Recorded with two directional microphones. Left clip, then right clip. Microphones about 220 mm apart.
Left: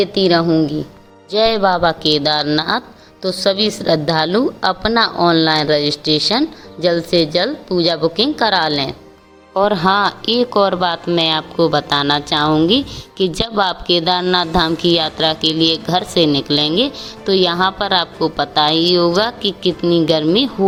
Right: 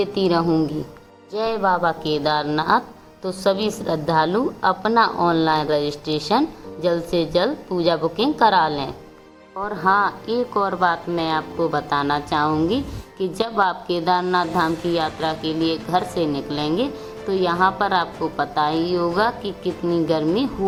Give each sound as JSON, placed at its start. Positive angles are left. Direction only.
{"t": 0.0, "sound": "a woman's voice", "side_deg": 20}
{"t": 1.3, "sound": "a woman's voice", "side_deg": 30}
{"t": 9.6, "sound": "speech", "side_deg": 35}